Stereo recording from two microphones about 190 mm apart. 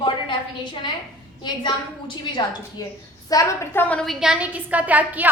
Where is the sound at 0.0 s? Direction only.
25° left (ahead or behind).